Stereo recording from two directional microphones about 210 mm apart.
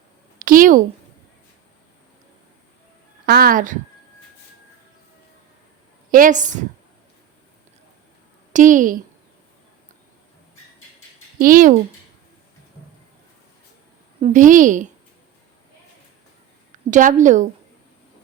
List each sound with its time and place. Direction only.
0.3 s a sound: 40° right (ahead or behind)
3.2 s speech: 45° right (ahead or behind)
6.1 s a woman's voice: 40° right (ahead or behind)
8.5 s a woman's voice: 40° right (ahead or behind)
11.3 s speech: 40° right (ahead or behind)
14.2 s a woman's voice: 35° right (ahead or behind)
16.9 s a woman's voice: 35° right (ahead or behind)